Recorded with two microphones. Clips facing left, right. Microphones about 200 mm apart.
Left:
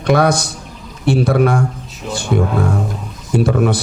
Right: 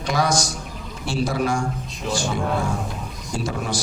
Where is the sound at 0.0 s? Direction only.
60° left (ahead or behind).